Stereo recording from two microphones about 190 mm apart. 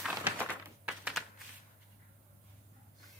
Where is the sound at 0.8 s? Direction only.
5° right (ahead or behind).